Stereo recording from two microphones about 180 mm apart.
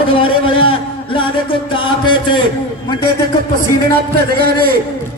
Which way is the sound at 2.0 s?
25° left (ahead or behind).